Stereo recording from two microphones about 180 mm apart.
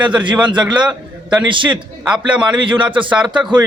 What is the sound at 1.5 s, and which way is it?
Speech, 25° right (ahead or behind).